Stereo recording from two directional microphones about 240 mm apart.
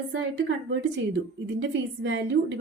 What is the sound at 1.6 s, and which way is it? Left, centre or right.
Speech, right.